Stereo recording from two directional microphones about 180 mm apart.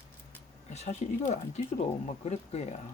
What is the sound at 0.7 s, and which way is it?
Speech, 40° left (ahead or behind).